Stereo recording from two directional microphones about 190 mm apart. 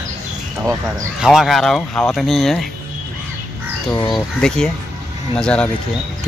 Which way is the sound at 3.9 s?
20° left (ahead or behind).